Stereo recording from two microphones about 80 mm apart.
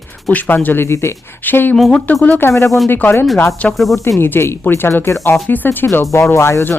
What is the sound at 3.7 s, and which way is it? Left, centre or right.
Speech, centre.